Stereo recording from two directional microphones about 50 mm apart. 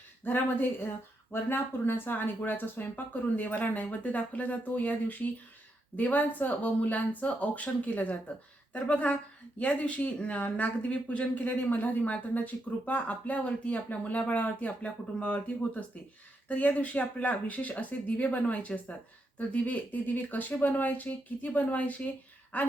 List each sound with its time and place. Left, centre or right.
0.3 s speech: left